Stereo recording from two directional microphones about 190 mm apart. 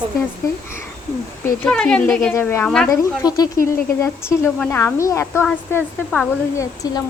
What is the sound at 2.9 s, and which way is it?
A woman's voice, 20° left (ahead or behind).